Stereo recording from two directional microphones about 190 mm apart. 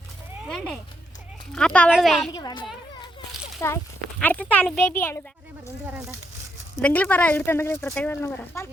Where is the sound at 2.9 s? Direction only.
25° left (ahead or behind).